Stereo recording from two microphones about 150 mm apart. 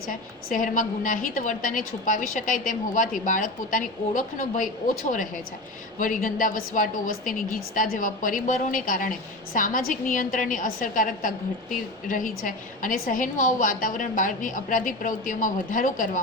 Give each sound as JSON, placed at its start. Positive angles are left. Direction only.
{"t": 0.1, "sound": "a woman's voice", "side_deg": 60}